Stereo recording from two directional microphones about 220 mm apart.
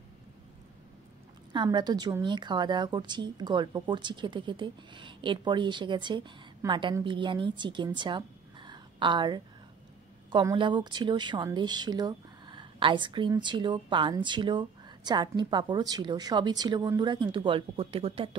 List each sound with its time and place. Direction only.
1.5 s a woman's voice: 20° right (ahead or behind)